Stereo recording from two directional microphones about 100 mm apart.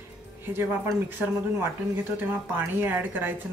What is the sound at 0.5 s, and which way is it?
Speech, 20° right (ahead or behind).